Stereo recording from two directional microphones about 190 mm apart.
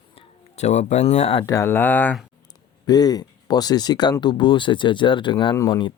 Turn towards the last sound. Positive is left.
turn(degrees=25)  # may be behind; listen again after turning